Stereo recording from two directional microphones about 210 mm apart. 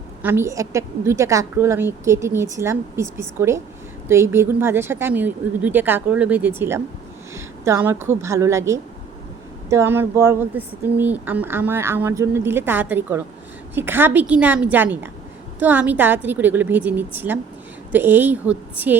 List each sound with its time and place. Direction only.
0.2 s speech: 10° right (ahead or behind)